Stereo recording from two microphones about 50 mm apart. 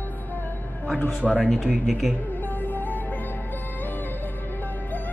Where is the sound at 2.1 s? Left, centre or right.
Left.